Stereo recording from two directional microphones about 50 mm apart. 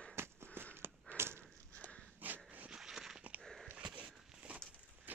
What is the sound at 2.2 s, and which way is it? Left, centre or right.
Dog, right.